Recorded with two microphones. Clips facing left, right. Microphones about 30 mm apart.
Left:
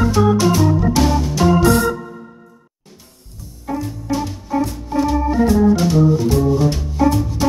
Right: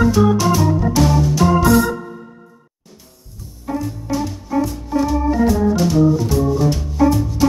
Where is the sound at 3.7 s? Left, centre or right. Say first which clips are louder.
Even; centre.